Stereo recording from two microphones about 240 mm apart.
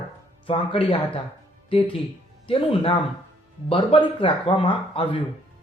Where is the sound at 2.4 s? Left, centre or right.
Left.